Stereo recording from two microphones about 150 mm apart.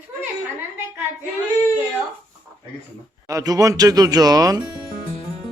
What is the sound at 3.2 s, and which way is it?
Speech, 25° right (ahead or behind).